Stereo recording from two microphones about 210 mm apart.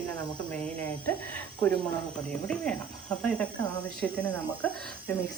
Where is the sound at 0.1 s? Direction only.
5° left (ahead or behind).